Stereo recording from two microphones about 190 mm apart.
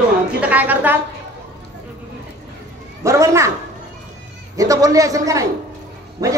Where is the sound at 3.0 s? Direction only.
15° right (ahead or behind).